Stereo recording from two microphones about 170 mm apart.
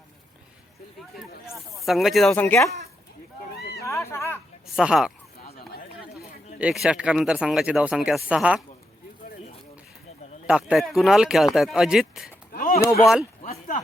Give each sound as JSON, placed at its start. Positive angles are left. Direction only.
{"t": 1.5, "sound": "speech", "side_deg": 0}
{"t": 2.3, "sound": "speech", "side_deg": 15}
{"t": 3.6, "sound": "a sound", "side_deg": 70}
{"t": 3.8, "sound": "speech", "side_deg": 15}
{"t": 4.6, "sound": "speech", "side_deg": -5}
{"t": 6.1, "sound": "speech", "side_deg": -5}
{"t": 10.4, "sound": "speech", "side_deg": -5}
{"t": 12.5, "sound": "a sound", "side_deg": 55}
{"t": 12.8, "sound": "speech", "side_deg": 15}